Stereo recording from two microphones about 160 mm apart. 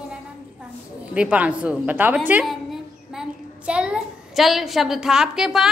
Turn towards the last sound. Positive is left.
turn(degrees=-5)  # may be behind; listen again after turning